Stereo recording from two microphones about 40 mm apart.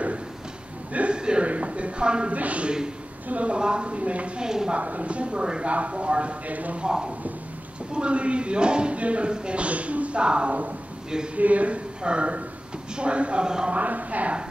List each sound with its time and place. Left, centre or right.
1.1 s speech: right
2.3 s speech: right
4.4 s speech: centre
4.7 s speech: right
7.9 s speech: right
11.3 s speech: right; by 13.7 s centre
13.7 s speech: right